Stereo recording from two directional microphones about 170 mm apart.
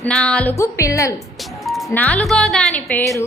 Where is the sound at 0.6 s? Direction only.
20° left (ahead or behind).